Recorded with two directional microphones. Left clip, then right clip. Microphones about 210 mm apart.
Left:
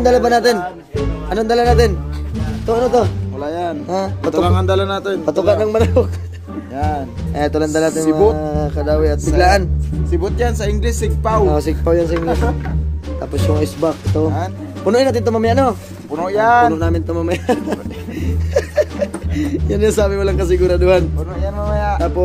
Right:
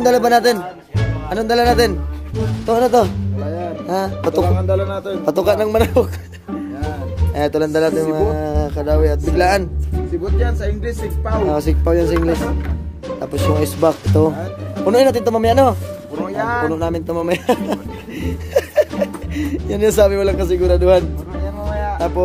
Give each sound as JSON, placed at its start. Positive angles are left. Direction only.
{"t": 0.0, "sound": "speech", "side_deg": -10}
{"t": 4.6, "sound": "music", "side_deg": 50}
{"t": 5.2, "sound": "speech", "side_deg": -20}
{"t": 7.3, "sound": "speech", "side_deg": -15}
{"t": 10.4, "sound": "music", "side_deg": 50}
{"t": 11.4, "sound": "speech", "side_deg": -10}
{"t": 13.2, "sound": "speech", "side_deg": -15}
{"t": 13.7, "sound": "speech", "side_deg": -25}
{"t": 14.9, "sound": "speech", "side_deg": -10}
{"t": 16.3, "sound": "music", "side_deg": 45}
{"t": 16.7, "sound": "speech", "side_deg": -15}
{"t": 18.2, "sound": "music", "side_deg": -15}